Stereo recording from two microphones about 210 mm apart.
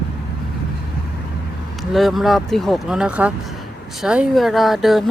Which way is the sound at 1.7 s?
Centre (ahead or behind).